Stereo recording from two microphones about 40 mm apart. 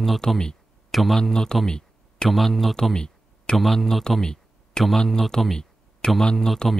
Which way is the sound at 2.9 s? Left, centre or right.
Centre.